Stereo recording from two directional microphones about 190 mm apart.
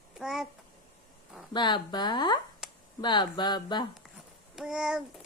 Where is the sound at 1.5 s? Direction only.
25° left (ahead or behind).